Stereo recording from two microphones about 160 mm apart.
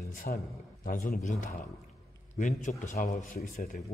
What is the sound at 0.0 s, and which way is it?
A man's voice, 65° left (ahead or behind).